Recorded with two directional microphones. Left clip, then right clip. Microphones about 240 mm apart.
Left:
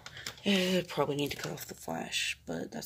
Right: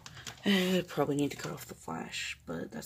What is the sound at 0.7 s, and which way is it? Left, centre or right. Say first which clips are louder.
Speech: even; right.